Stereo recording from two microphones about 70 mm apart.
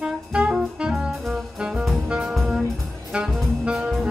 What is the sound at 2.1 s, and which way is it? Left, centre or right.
Jazz, centre.